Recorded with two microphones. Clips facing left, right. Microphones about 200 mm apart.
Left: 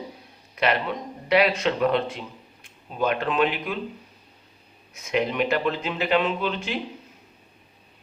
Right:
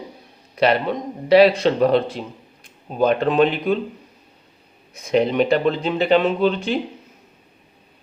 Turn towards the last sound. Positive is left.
turn(degrees=-35)  # may be behind; listen again after turning